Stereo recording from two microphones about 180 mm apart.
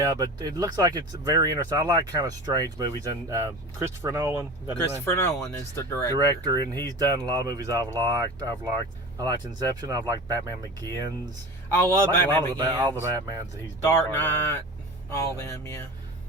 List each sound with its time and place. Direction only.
0.0 s speech: 20° right (ahead or behind)
5.0 s speech: 15° left (ahead or behind)
6.1 s speech: 20° right (ahead or behind)
11.7 s speech: 15° left (ahead or behind)
12.5 s speech: 20° right (ahead or behind)
14.1 s speech: 10° left (ahead or behind)